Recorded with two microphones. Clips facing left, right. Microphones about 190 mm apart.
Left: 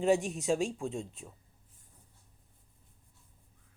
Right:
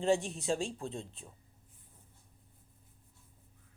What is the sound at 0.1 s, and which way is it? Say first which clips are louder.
Speech: left 1 dB; 30° right (ahead or behind).